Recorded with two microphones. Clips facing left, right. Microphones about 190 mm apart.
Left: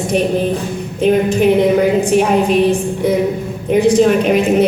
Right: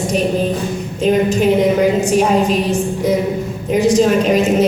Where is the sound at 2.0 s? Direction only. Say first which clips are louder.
Left 1 dB; 60° left (ahead or behind).